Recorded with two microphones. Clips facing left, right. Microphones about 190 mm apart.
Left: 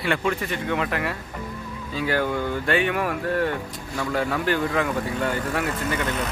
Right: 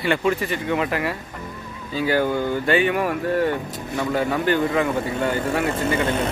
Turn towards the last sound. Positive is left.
turn(degrees=-30)  # may be behind; listen again after turning